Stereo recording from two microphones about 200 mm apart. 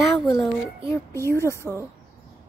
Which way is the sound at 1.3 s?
15° left (ahead or behind).